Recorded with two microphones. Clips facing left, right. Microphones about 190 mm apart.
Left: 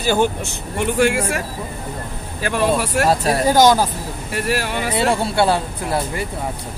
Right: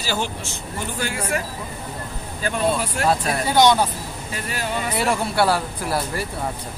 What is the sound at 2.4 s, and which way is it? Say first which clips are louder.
Speech: left 3 dB; 75° left (ahead or behind).